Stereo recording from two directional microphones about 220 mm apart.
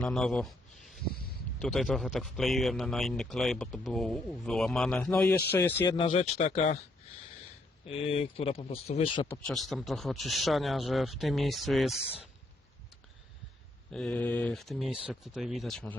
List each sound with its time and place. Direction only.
0.0 s a man's voice: centre (ahead or behind)
1.0 s a sound: 45° left (ahead or behind)
1.6 s a man's voice: centre (ahead or behind); by 6.1 s 20° left (ahead or behind)
6.3 s speech: 30° left (ahead or behind)
7.9 s speech: 25° left (ahead or behind)
9.3 s a man's voice: 5° left (ahead or behind)
11.9 s speech: 25° left (ahead or behind)
13.9 s a man's voice: 5° left (ahead or behind)